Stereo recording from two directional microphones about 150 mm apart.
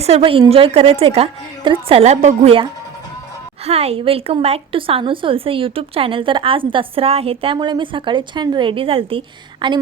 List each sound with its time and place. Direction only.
0.0 s a woman's voice: 40° right (ahead or behind)
3.7 s a woman's voice: 40° right (ahead or behind)